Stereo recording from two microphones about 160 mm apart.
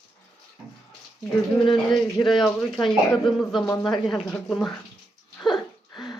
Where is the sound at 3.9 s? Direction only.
Centre (ahead or behind).